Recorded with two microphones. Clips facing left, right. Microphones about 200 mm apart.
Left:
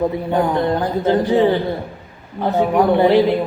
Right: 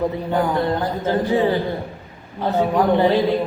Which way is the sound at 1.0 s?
15° left (ahead or behind).